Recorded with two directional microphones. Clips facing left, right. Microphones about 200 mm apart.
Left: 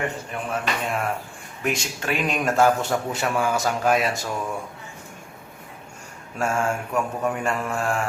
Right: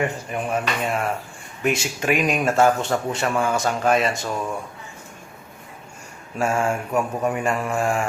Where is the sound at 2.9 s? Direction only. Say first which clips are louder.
Right 2 dB; centre (ahead or behind).